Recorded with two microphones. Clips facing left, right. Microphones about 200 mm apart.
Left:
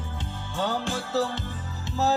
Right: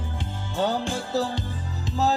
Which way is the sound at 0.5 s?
15° right (ahead or behind).